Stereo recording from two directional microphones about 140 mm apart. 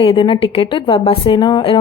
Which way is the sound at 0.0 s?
35° left (ahead or behind).